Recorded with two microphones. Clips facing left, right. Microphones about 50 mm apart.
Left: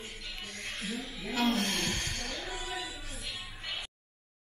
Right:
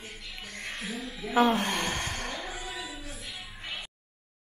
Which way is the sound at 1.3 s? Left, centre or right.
Right.